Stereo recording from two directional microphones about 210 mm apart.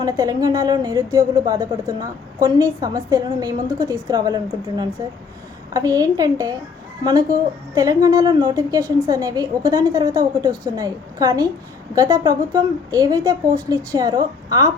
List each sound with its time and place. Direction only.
0.0 s a woman's voice: 15° right (ahead or behind)
5.7 s a woman's voice: 15° right (ahead or behind)